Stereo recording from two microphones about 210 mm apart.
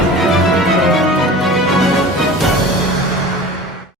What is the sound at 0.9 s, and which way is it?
Music, centre (ahead or behind).